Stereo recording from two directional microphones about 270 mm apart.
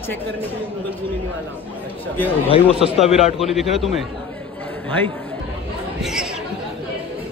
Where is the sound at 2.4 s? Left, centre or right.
Left.